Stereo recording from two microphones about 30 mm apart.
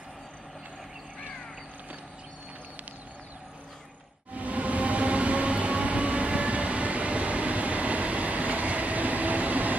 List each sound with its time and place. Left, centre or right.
4.4 s train: right